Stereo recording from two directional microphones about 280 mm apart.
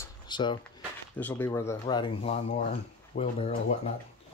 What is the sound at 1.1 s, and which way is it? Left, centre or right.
Speech, centre.